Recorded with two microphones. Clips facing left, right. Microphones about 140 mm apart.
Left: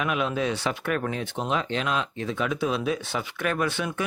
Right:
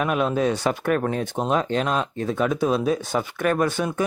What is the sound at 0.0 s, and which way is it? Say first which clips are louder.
Speech: right 5 dB; 40° right (ahead or behind).